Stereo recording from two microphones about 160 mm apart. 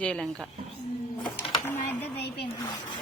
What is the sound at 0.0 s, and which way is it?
Speech, 5° left (ahead or behind).